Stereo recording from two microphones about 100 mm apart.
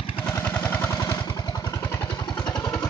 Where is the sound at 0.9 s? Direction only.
35° left (ahead or behind).